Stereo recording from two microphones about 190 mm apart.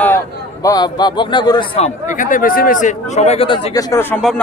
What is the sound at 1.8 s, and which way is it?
Speech, 40° left (ahead or behind).